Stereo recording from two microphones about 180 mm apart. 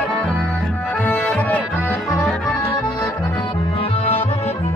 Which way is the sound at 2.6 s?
15° left (ahead or behind).